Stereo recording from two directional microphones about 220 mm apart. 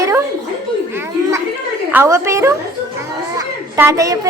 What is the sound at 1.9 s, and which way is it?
A woman's voice, 10° right (ahead or behind).